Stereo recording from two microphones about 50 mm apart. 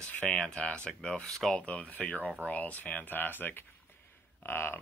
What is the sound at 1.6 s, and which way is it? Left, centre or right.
Speech, left.